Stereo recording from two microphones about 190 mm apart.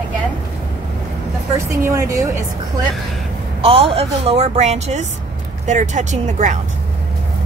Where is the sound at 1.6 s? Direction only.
15° right (ahead or behind).